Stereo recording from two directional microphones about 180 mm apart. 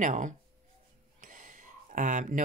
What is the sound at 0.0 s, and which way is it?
Speech, 45° right (ahead or behind).